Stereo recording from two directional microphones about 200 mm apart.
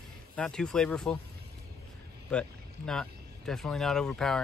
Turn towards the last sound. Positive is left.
turn(degrees=5)  # may be behind; listen again after turning